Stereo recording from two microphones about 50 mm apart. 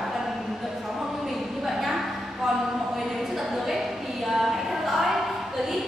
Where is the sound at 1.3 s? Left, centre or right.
Centre.